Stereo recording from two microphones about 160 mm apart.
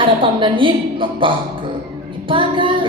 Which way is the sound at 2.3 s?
30° right (ahead or behind).